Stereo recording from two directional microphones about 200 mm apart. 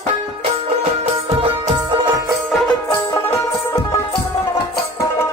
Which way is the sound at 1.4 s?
30° right (ahead or behind).